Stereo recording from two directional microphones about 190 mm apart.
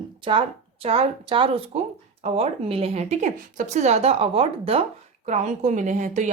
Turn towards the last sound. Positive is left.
turn(degrees=-40)  # may be behind; listen again after turning